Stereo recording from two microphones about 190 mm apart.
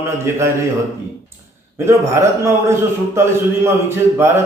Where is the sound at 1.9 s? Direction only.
15° right (ahead or behind).